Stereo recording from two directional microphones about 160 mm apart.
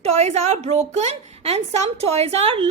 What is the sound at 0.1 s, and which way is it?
A woman's voice, 45° right (ahead or behind).